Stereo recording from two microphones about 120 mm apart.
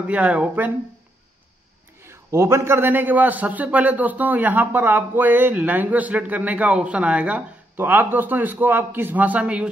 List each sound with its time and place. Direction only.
0.0 s a man's voice: 10° right (ahead or behind)
2.0 s a man's voice: 25° right (ahead or behind)